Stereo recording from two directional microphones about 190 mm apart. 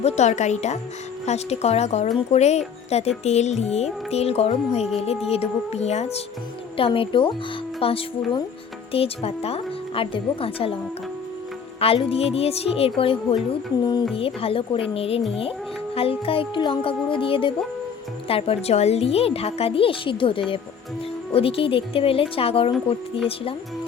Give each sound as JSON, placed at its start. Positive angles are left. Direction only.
{"t": 0.0, "sound": "speech", "side_deg": 35}
{"t": 11.8, "sound": "speech", "side_deg": 30}